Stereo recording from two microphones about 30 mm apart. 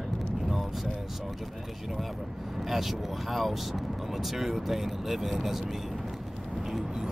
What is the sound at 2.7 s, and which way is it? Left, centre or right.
Speech, centre.